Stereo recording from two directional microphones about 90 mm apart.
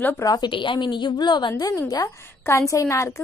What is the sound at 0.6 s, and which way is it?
A woman's voice, 60° left (ahead or behind).